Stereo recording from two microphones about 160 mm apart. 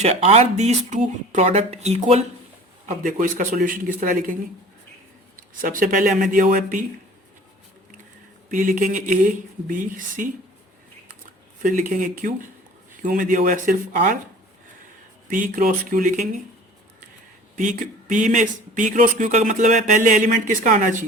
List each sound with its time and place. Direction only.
0.0 s speech: 40° right (ahead or behind)
2.8 s a man's voice: 55° right (ahead or behind)
5.4 s a man's voice: 60° right (ahead or behind)
8.4 s a man's voice: 55° right (ahead or behind)
11.6 s a man's voice: 55° right (ahead or behind)
15.3 s a man's voice: 60° right (ahead or behind)
17.6 s speech: 55° right (ahead or behind)